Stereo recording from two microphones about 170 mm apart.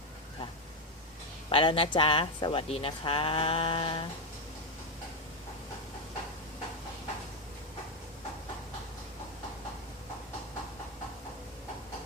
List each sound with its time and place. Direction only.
1.5 s speech: 30° left (ahead or behind)